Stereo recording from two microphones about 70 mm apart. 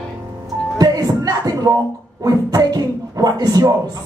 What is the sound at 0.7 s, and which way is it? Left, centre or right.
Speech, right.